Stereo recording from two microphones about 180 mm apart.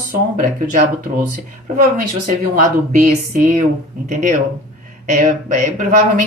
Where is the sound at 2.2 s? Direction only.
45° right (ahead or behind).